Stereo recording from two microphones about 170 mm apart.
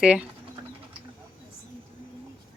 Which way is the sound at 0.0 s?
5° right (ahead or behind).